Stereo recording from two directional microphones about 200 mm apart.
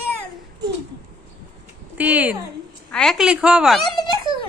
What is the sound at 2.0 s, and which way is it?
A woman's voice, 5° right (ahead or behind).